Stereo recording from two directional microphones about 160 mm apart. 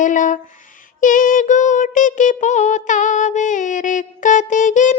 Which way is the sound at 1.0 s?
55° left (ahead or behind).